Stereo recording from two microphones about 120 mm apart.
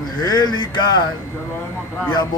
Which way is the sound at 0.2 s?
35° left (ahead or behind).